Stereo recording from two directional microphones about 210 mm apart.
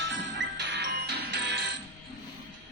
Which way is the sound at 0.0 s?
60° right (ahead or behind).